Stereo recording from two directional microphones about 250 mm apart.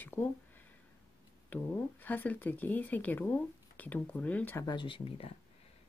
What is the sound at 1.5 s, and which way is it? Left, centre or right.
Speech, centre.